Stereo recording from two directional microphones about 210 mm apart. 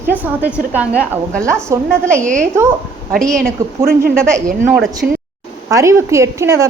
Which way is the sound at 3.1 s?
Centre (ahead or behind).